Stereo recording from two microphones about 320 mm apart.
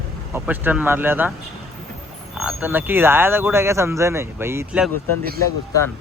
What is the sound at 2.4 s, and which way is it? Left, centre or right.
Speech, centre.